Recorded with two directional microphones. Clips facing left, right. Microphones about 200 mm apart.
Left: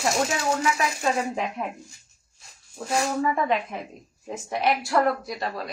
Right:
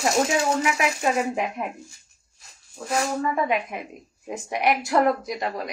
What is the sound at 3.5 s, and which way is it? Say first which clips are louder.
A woman's voice: even; 15° right (ahead or behind).